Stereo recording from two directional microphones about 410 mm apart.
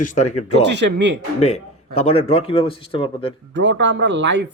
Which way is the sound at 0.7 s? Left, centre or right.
Right.